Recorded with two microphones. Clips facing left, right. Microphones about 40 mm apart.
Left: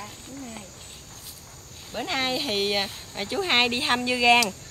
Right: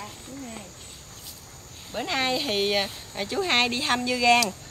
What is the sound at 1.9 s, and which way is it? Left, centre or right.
Speech, centre.